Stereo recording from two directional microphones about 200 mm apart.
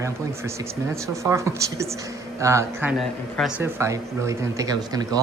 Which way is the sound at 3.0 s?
Centre (ahead or behind).